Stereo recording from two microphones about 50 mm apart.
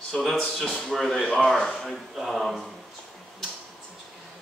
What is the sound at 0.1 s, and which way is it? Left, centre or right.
Speech, centre.